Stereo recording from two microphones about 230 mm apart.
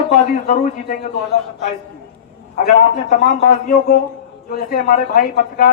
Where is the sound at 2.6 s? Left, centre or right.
Left.